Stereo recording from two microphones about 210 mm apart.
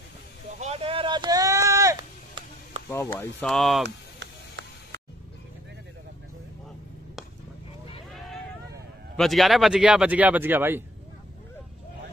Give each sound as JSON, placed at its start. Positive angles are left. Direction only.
{"t": 0.6, "sound": "chop", "side_deg": -30}
{"t": 2.9, "sound": "speech", "side_deg": 10}
{"t": 3.8, "sound": "a sound", "side_deg": -60}
{"t": 9.1, "sound": "speech", "side_deg": 0}